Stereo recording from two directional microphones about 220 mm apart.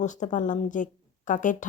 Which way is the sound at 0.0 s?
35° left (ahead or behind).